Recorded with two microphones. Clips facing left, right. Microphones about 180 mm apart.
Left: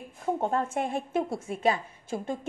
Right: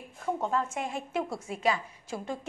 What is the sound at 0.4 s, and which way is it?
A woman's voice, 55° left (ahead or behind).